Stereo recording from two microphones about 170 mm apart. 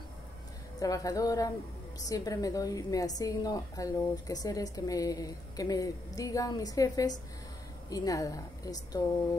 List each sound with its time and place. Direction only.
0.7 s a woman's voice: 20° left (ahead or behind)